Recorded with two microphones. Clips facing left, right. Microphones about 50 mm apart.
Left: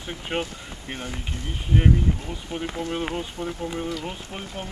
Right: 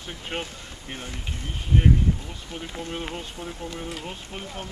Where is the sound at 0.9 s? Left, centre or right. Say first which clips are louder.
Left 3 dB; centre.